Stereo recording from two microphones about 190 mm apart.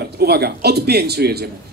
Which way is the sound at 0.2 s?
55° right (ahead or behind).